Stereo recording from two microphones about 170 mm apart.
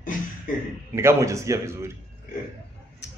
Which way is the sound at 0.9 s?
15° right (ahead or behind).